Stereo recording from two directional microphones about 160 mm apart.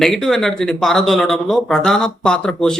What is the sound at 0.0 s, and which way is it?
Speech, centre (ahead or behind).